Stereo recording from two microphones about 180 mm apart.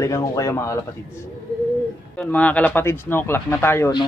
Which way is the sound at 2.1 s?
10° left (ahead or behind).